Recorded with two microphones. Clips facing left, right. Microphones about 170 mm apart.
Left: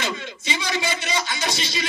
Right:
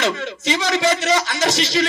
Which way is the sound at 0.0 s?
75° right (ahead or behind).